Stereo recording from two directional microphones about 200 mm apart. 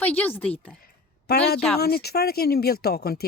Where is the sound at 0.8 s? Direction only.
50° left (ahead or behind).